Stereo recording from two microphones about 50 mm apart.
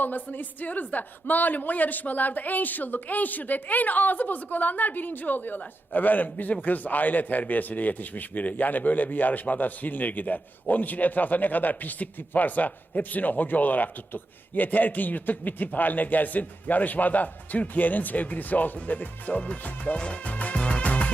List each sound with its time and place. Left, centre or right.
0.0 s a woman's voice: left